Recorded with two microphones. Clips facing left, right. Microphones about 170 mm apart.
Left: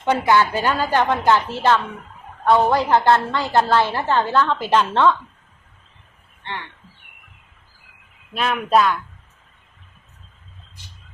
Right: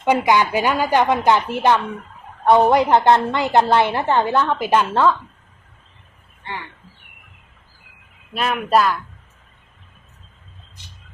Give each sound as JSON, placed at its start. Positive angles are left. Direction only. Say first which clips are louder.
{"t": 0.0, "sound": "a woman's voice", "louder": "right 1 dB", "side_deg": -15}
{"t": 6.4, "sound": "speech", "louder": "even", "side_deg": -5}
{"t": 8.3, "sound": "speech", "louder": "even", "side_deg": -5}